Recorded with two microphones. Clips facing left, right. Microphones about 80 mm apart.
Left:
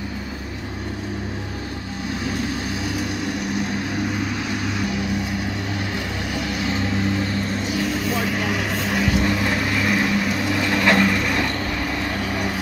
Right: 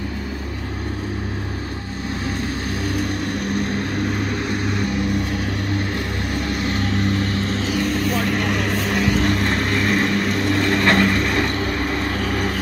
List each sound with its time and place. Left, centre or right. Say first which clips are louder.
3.1 s vehicle: right 2 dB; right
6.3 s vehicle: right 1 dB; right
6.8 s vehicle: right 1 dB; right
7.6 s vehicle: right 2 dB; centre